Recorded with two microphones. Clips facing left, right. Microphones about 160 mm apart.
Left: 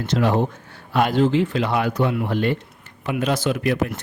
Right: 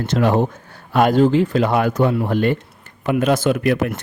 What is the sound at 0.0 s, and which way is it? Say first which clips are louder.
Speech: right 3 dB; 50° right (ahead or behind).